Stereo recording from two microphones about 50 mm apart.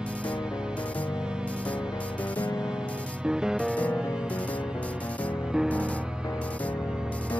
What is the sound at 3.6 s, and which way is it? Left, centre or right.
Music, left.